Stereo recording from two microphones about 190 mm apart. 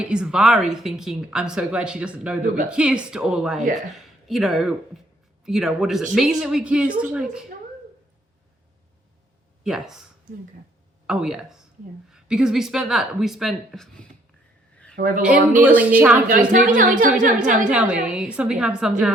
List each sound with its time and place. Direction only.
0.0 s speech: 5° right (ahead or behind)
9.6 s speech: centre (ahead or behind)
14.9 s a woman's voice: 45° right (ahead or behind)
15.6 s speech: 10° right (ahead or behind)
16.5 s a woman's voice: 45° right (ahead or behind)
17.3 s speech: 5° right (ahead or behind)